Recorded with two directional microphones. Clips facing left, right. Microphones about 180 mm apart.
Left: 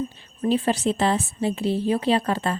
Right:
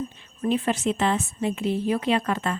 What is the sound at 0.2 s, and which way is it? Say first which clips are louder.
A woman's voice: left 2 dB; 35° left (ahead or behind).